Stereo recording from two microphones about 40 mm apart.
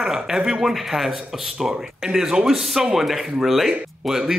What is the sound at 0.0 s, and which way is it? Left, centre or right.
Speech, centre.